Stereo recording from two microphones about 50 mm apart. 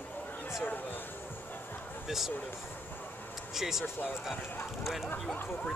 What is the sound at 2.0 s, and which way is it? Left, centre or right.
Speech, centre.